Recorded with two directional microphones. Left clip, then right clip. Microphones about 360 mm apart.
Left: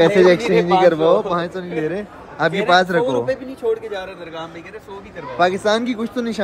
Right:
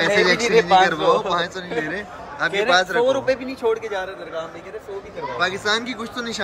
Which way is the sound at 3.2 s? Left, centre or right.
Right.